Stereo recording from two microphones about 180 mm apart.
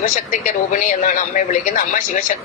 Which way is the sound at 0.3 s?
45° left (ahead or behind).